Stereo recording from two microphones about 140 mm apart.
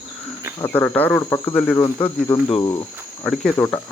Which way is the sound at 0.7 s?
10° left (ahead or behind).